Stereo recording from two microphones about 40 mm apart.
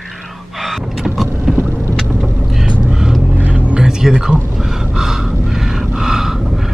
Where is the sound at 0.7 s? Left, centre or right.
Centre.